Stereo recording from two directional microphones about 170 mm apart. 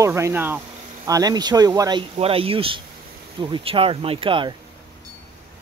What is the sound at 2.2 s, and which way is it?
Speech, 35° right (ahead or behind).